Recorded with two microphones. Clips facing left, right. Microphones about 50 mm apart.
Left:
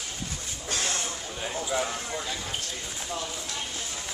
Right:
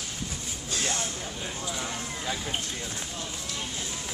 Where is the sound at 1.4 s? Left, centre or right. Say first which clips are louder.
Left 7 dB; centre.